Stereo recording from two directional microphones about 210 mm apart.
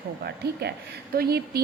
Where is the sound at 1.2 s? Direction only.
50° right (ahead or behind).